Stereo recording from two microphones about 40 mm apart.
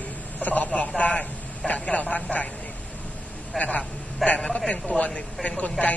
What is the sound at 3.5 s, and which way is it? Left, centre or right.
Speech, left.